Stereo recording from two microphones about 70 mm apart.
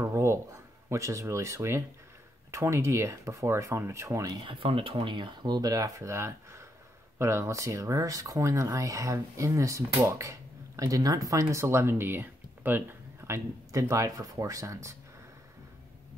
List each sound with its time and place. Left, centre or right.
0.1 s a sound: right
2.5 s speech: right
5.2 s speech: right
10.8 s speech: right
13.2 s speech: right